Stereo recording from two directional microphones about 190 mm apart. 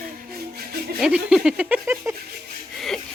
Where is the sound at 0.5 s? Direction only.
55° right (ahead or behind).